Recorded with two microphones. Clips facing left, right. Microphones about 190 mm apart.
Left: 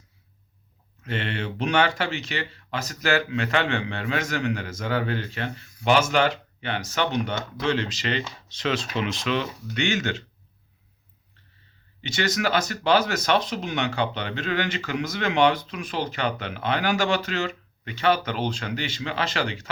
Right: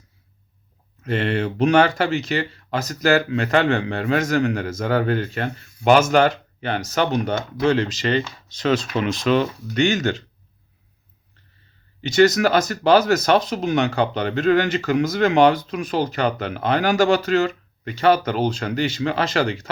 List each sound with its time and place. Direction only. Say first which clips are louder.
1.0 s speech: right 8 dB; 40° right (ahead or behind)
12.0 s speech: right 10 dB; 40° right (ahead or behind)